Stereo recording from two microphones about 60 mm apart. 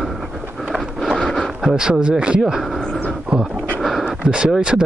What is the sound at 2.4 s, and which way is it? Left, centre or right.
Speech, centre.